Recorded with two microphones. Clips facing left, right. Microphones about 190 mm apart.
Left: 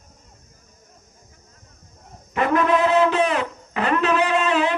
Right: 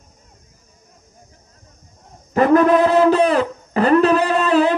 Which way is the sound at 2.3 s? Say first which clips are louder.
Right 7 dB; 40° right (ahead or behind).